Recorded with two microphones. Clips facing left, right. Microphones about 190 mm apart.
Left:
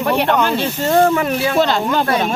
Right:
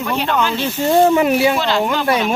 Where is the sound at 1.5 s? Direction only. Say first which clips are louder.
Left 2 dB; 45° left (ahead or behind).